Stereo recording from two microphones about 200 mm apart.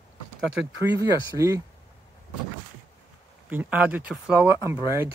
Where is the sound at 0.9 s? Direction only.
15° right (ahead or behind).